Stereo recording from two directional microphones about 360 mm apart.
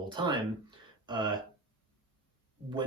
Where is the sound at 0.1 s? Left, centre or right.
Centre.